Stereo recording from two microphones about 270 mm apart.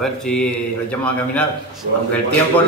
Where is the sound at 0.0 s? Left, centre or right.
Centre.